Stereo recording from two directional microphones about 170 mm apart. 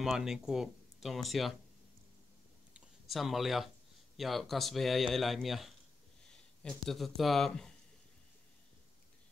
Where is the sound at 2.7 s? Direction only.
Centre (ahead or behind).